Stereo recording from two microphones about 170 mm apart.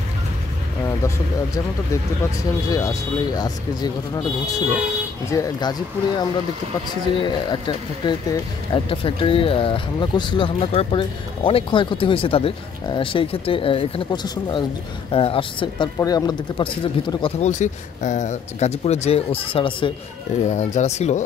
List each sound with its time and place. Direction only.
0.8 s speech: 15° left (ahead or behind)
2.7 s speech: 20° left (ahead or behind)
17.5 s speech: 45° left (ahead or behind)
20.4 s speech: 45° left (ahead or behind)